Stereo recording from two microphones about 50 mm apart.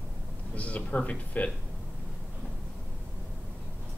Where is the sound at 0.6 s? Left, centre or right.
Left.